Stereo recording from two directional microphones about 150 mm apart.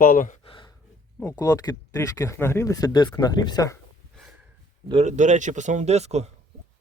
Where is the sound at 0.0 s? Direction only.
65° left (ahead or behind).